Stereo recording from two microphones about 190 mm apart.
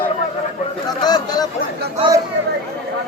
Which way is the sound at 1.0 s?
20° left (ahead or behind).